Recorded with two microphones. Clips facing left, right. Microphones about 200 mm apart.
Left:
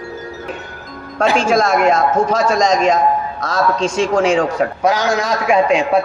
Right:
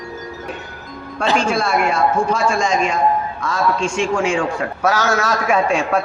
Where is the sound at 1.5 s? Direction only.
45° left (ahead or behind).